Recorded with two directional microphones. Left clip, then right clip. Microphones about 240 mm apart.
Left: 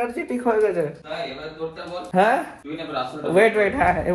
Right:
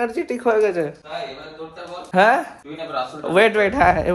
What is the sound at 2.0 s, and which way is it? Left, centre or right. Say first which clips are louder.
Speech: right 3 dB; right.